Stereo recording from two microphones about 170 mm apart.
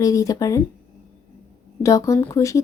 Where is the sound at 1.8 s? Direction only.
20° left (ahead or behind).